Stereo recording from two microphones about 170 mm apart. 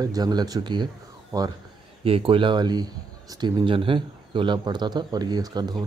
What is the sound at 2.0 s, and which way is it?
A man's voice, 30° right (ahead or behind).